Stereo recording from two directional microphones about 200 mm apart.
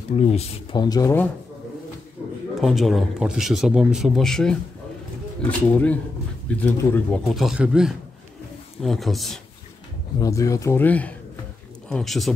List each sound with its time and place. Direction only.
0.1 s speech: 30° left (ahead or behind); by 1.3 s 10° left (ahead or behind)
2.5 s speech: centre (ahead or behind)
10.1 s speech: 15° left (ahead or behind); by 12.4 s centre (ahead or behind)